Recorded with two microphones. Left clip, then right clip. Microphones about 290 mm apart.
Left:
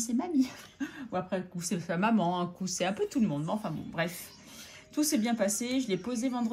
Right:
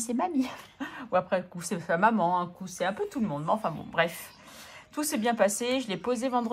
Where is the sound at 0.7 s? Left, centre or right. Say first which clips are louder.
Right 7 dB; right.